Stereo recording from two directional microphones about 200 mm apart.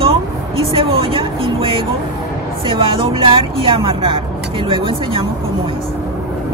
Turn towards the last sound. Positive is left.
turn(degrees=-25)  # may be behind; listen again after turning